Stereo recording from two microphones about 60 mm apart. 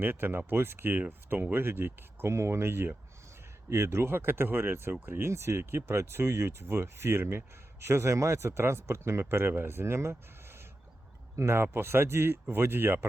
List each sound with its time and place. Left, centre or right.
0.0 s speech: right
5.3 s speech: right